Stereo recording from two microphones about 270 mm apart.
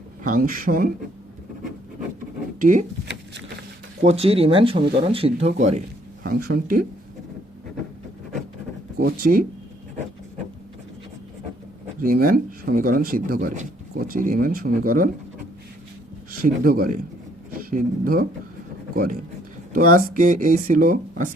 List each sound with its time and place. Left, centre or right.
0.3 s speech: right
2.6 s speech: right
9.0 s speech: right
12.0 s speech: right
16.4 s speech: right
19.7 s speech: right